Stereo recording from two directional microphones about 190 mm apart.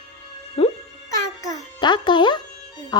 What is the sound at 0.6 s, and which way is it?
Music, 30° left (ahead or behind).